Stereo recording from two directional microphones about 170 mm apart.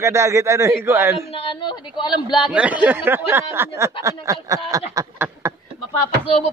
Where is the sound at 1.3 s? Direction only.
35° left (ahead or behind).